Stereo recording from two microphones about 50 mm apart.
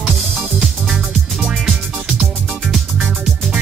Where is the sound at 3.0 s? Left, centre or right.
Centre.